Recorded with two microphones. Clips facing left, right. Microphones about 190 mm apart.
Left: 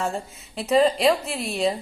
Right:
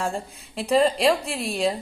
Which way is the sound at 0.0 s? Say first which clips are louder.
Even; centre (ahead or behind).